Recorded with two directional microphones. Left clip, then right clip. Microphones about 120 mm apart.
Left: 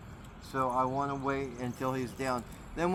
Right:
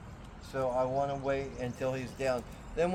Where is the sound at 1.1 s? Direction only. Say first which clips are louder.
Right 1 dB; 35° right (ahead or behind).